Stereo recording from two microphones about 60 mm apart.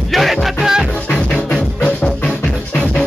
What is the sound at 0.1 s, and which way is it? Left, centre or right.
Music, centre.